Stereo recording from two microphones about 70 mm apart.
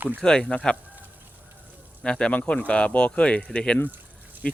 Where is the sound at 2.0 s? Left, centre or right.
Centre.